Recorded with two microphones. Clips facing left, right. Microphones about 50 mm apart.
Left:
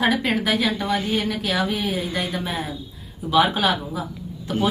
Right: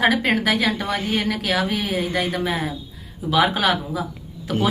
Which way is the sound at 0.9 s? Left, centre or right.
Right.